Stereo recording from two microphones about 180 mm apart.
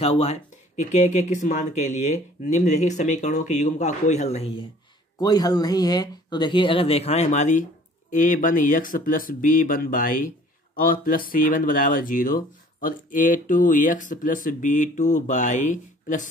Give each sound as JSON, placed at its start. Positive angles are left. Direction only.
{"t": 0.0, "sound": "speech", "side_deg": 35}
{"t": 5.2, "sound": "speech", "side_deg": 20}